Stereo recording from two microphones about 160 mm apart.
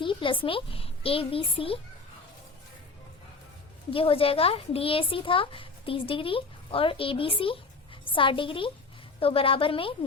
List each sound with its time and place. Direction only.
0.0 s a sound: 30° left (ahead or behind)
0.4 s a woman's voice: 35° left (ahead or behind)
3.9 s a woman's voice: 35° left (ahead or behind)